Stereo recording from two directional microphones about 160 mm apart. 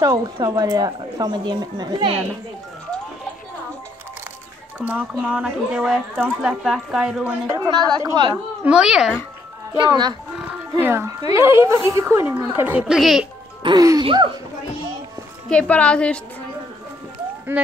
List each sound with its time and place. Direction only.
0.0 s speech: 20° right (ahead or behind)
4.7 s a woman's voice: 10° right (ahead or behind)
7.4 s speech: 20° right (ahead or behind)
8.6 s speech: 5° right (ahead or behind)
10.8 s a woman's voice: 15° right (ahead or behind)
13.6 s speech: 25° right (ahead or behind)
15.5 s a woman's voice: 10° left (ahead or behind)
17.5 s a woman's voice: 15° right (ahead or behind)